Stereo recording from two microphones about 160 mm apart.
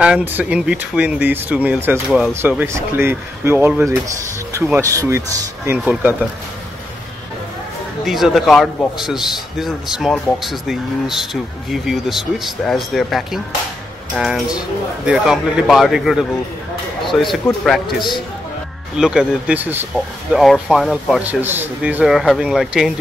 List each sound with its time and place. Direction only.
0.0 s speech: 10° right (ahead or behind)
8.0 s a man's voice: centre (ahead or behind)
20.3 s a man's voice: centre (ahead or behind)
21.2 s a man's voice: 10° right (ahead or behind)